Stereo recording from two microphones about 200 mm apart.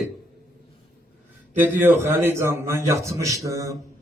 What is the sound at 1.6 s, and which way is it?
A man's voice, 10° right (ahead or behind).